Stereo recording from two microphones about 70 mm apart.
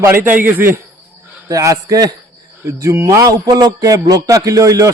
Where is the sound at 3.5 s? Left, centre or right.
Right.